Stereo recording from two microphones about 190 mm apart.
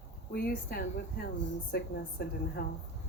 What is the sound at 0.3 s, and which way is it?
Speech, 55° left (ahead or behind).